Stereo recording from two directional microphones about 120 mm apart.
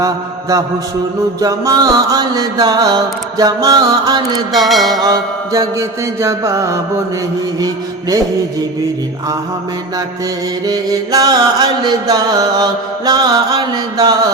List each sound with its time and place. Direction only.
0.0 s mantra: 30° right (ahead or behind)
4.5 s music: centre (ahead or behind)
5.0 s mantra: 30° right (ahead or behind)
10.7 s mantra: 30° right (ahead or behind)